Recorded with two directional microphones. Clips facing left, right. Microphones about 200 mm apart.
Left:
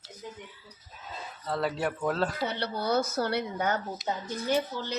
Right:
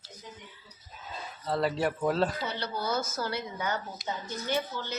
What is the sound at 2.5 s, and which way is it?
Speech, 60° left (ahead or behind).